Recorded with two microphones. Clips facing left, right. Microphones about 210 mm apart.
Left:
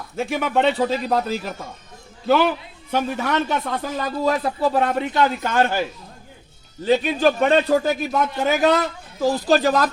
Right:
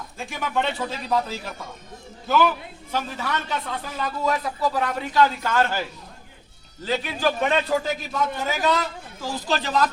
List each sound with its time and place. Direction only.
0.2 s speech: 65° left (ahead or behind)
2.9 s a man's voice: 50° left (ahead or behind); by 5.8 s 15° left (ahead or behind)
6.8 s a man's voice: 20° left (ahead or behind)
7.7 s speech: 55° left (ahead or behind)
9.2 s speech: 45° left (ahead or behind)